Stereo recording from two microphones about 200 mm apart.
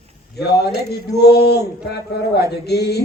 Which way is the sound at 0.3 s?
55° left (ahead or behind).